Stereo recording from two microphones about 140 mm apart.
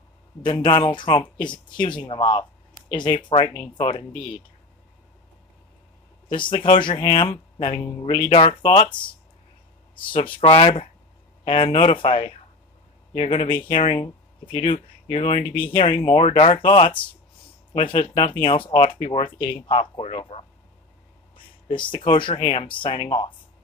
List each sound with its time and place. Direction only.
0.4 s speech: 35° left (ahead or behind)
6.2 s speech: 35° left (ahead or behind)
10.0 s speech: 35° left (ahead or behind)
21.6 s speech: 35° left (ahead or behind)